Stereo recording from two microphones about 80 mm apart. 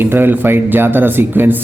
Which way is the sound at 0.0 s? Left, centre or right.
Right.